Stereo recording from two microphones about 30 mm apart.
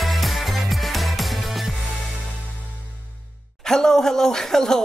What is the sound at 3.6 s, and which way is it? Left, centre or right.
Speech, centre.